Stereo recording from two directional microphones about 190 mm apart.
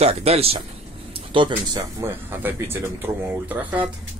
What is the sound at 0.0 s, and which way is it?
Speech, 35° right (ahead or behind).